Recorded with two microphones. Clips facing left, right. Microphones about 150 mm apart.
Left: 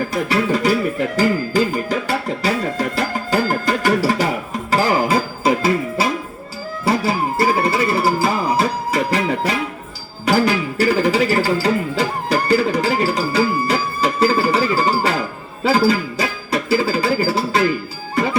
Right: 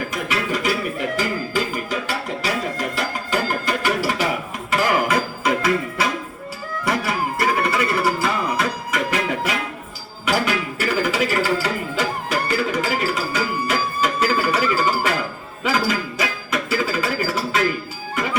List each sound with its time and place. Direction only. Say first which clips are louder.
0.1 s music: left 6 dB; 35° left (ahead or behind)